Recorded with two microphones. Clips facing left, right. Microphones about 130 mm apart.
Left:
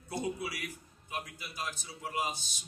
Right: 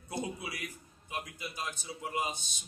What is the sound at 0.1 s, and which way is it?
A man's voice, 20° right (ahead or behind).